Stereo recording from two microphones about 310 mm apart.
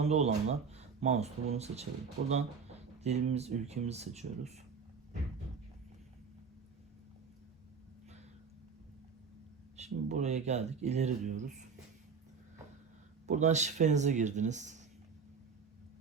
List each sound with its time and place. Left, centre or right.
0.0 s speech: right
9.7 s speech: right
13.2 s speech: right